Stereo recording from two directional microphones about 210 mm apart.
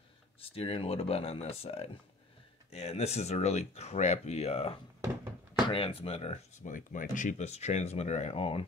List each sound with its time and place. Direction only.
0.4 s speech: 25° left (ahead or behind)